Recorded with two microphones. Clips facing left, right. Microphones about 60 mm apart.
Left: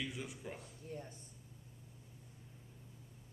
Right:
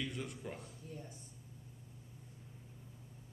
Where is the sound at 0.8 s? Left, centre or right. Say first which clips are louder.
Left 4 dB; left.